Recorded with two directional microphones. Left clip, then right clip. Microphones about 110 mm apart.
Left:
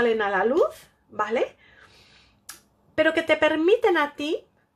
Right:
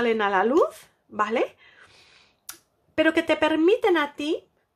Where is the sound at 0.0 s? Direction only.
35° right (ahead or behind).